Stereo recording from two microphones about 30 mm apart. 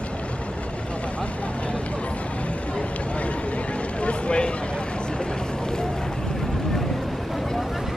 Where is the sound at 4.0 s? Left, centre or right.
Left.